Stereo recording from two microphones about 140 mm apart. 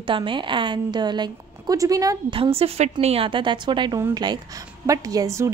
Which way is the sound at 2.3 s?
45° right (ahead or behind).